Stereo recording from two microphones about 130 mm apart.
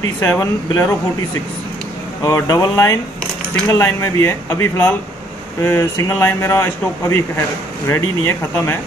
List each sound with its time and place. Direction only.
0.2 s speech: 25° left (ahead or behind)
2.2 s speech: 30° left (ahead or behind)